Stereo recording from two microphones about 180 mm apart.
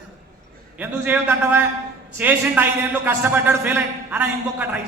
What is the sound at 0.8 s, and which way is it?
A man's voice, 10° right (ahead or behind).